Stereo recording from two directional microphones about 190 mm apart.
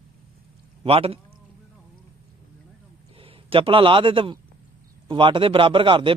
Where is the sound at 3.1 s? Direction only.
30° right (ahead or behind).